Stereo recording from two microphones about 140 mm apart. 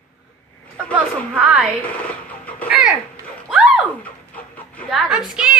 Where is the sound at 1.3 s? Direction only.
10° right (ahead or behind).